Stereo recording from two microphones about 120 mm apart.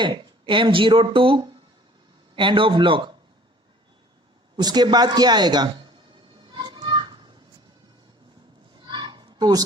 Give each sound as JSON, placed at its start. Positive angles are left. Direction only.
{"t": 0.0, "sound": "speech", "side_deg": -40}
{"t": 4.5, "sound": "speech", "side_deg": -35}
{"t": 6.5, "sound": "children playing", "side_deg": -35}
{"t": 8.9, "sound": "a sound", "side_deg": -40}